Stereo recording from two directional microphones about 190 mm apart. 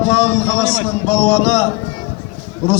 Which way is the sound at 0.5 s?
35° left (ahead or behind).